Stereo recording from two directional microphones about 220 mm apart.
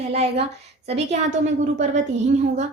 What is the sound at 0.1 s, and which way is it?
Speech, 30° right (ahead or behind).